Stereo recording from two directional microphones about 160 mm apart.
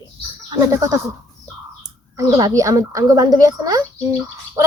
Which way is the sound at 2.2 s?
25° right (ahead or behind).